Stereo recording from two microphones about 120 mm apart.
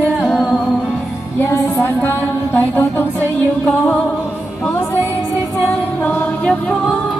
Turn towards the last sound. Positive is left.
turn(degrees=10)  # may be behind; listen again after turning